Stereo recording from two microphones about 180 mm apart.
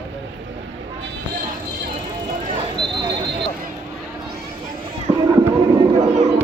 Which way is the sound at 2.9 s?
25° right (ahead or behind).